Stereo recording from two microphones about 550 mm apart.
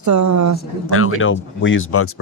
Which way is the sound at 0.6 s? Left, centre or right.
Left.